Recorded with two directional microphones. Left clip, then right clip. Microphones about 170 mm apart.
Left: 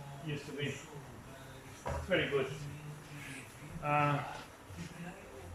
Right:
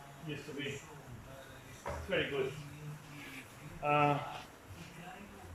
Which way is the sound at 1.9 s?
5° left (ahead or behind).